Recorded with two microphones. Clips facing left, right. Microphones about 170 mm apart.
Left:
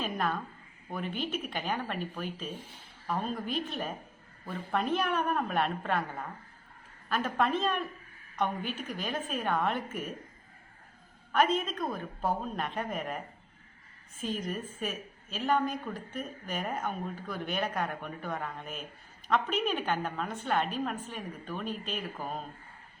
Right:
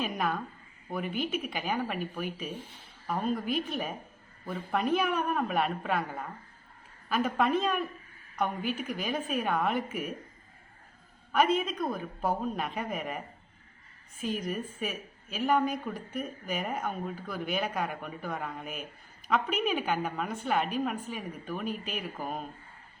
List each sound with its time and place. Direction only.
0.0 s a woman's voice: 5° right (ahead or behind)
11.3 s a woman's voice: 5° right (ahead or behind)